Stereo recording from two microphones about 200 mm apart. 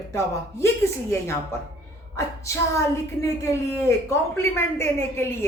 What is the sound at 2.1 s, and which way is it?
Female singing, 15° left (ahead or behind).